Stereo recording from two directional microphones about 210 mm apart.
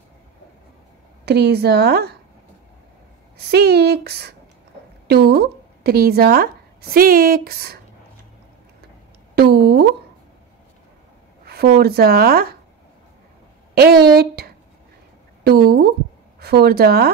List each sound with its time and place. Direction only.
1.2 s speech: 50° right (ahead or behind)
3.3 s speech: 50° right (ahead or behind)
9.3 s speech: 50° right (ahead or behind)
11.4 s speech: 50° right (ahead or behind)
13.7 s a woman's voice: 50° right (ahead or behind)